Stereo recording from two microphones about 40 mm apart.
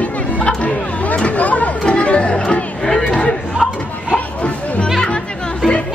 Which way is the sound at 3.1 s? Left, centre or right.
Left.